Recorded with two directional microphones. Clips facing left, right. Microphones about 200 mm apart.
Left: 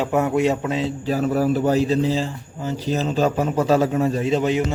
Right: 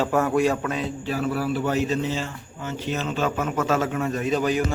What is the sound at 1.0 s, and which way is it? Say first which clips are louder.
A man's voice: left 6 dB; 40° left (ahead or behind).